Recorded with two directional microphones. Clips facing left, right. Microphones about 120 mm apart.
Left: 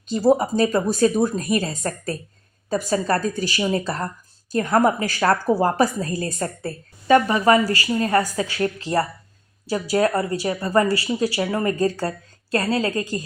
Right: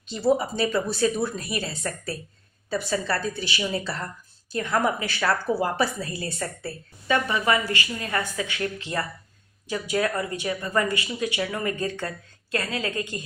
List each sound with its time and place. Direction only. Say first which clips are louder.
0.1 s a woman's voice: left 5 dB; 40° left (ahead or behind)